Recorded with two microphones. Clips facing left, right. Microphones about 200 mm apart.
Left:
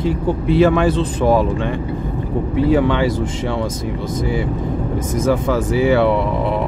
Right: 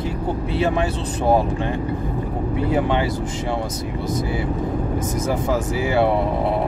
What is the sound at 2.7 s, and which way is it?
Speech, 90° left.